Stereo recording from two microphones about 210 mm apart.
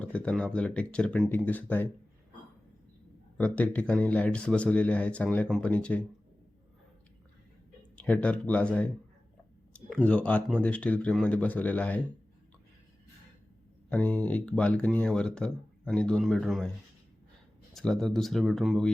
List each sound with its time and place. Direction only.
0.0 s speech: 5° left (ahead or behind)
3.3 s speech: 5° left (ahead or behind)
7.9 s speech: 5° left (ahead or behind)
13.9 s speech: 5° left (ahead or behind)
17.7 s speech: centre (ahead or behind)